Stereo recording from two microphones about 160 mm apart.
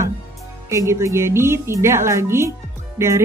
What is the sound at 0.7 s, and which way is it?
Speech, 15° right (ahead or behind).